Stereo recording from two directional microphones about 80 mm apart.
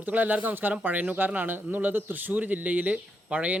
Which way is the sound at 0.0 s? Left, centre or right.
Right.